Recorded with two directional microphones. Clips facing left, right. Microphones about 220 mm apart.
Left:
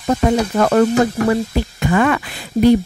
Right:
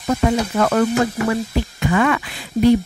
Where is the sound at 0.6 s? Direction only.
35° left (ahead or behind).